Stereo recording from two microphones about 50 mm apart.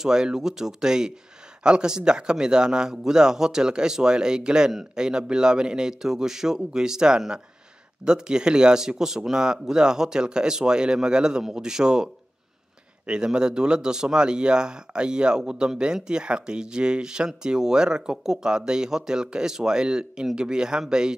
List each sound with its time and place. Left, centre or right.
0.0 s speech: centre